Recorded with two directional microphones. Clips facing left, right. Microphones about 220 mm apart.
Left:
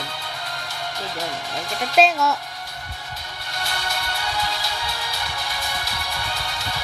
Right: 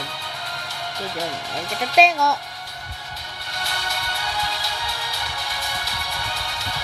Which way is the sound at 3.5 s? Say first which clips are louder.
Left 2 dB; 50° left (ahead or behind).